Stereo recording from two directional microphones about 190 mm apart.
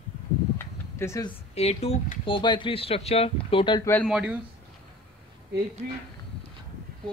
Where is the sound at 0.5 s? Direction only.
15° left (ahead or behind).